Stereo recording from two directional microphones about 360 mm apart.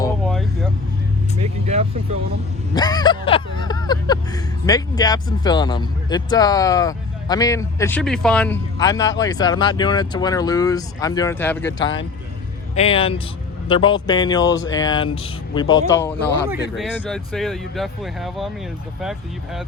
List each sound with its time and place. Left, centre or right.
0.0 s vehicle: centre
1.4 s vehicle: centre
2.7 s a sound: centre
12.7 s speech: centre